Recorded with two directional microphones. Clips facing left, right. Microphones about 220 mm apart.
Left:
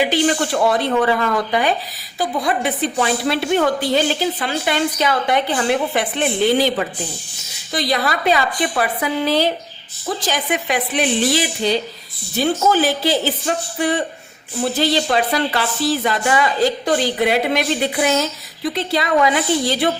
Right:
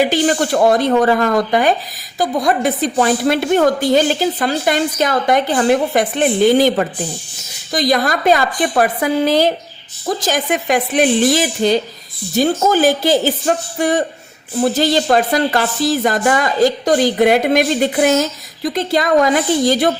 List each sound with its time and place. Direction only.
0.0 s speech: 45° right (ahead or behind)